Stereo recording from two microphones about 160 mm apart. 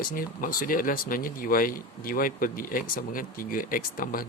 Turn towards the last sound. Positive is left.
turn(degrees=60)  # may be behind; listen again after turning